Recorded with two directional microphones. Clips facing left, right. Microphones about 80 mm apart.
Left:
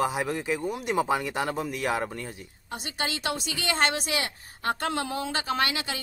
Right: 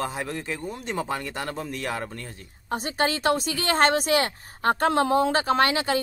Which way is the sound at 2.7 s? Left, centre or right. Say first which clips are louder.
Right 7 dB; right.